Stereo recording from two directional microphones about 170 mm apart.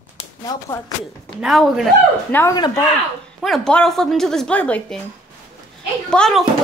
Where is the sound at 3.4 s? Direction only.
Centre (ahead or behind).